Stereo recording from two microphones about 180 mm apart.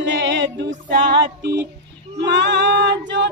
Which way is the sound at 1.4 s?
70° right (ahead or behind).